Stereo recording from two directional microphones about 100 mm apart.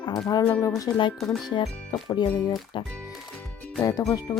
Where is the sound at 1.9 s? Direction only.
50° left (ahead or behind).